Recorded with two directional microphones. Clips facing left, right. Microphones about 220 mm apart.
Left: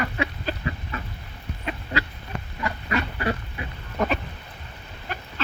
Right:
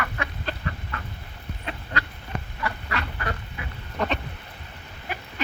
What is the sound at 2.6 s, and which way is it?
Goose, 20° left (ahead or behind).